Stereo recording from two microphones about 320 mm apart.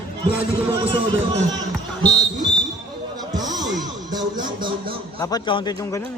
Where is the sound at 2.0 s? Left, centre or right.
Centre.